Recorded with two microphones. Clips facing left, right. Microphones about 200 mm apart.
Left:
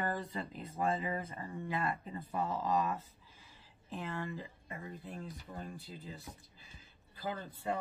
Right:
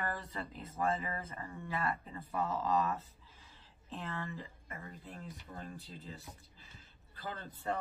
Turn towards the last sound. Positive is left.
turn(degrees=10)  # may be behind; listen again after turning